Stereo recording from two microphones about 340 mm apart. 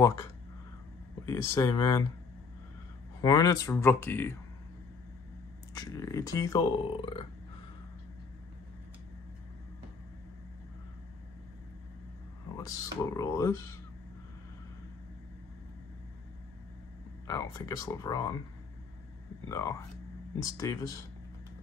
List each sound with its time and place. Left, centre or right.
0.0 s speech: centre
3.2 s speech: centre
5.8 s speech: centre
12.5 s speech: centre
17.3 s speech: centre
19.5 s speech: centre